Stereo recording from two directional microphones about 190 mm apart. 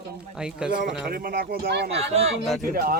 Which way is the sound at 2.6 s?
50° right (ahead or behind).